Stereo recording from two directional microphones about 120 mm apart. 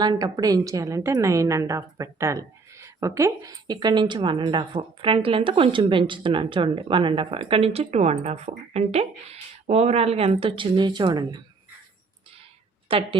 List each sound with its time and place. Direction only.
0.0 s a woman's voice: 35° right (ahead or behind)
12.9 s a woman's voice: 50° right (ahead or behind)